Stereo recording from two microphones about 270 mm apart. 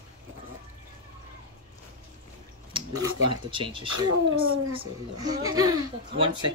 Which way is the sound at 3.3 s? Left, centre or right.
Centre.